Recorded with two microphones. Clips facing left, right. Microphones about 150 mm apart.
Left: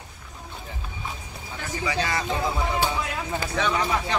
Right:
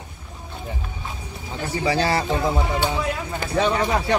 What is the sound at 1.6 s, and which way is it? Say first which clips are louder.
A man's voice: right 6 dB; 35° right (ahead or behind).